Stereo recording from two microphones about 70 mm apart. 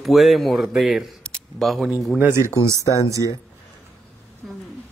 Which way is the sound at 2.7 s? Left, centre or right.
Left.